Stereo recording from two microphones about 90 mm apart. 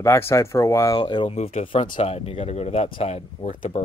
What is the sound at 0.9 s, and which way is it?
Speech, 60° left (ahead or behind).